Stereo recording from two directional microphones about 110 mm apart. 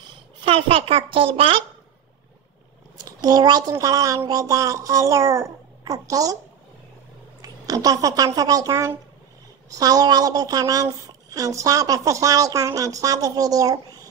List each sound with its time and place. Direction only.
0.5 s a woman's voice: 55° right (ahead or behind)
3.1 s a woman's voice: 35° right (ahead or behind)
7.4 s a woman's voice: 35° right (ahead or behind)